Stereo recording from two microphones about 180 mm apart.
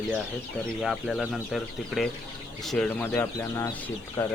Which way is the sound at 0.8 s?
Centre (ahead or behind).